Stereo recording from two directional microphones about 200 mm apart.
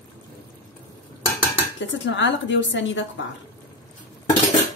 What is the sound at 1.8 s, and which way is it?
A woman's voice, 65° left (ahead or behind).